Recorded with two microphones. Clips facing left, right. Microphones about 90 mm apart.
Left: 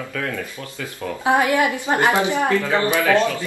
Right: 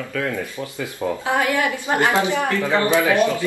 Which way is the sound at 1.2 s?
20° left (ahead or behind).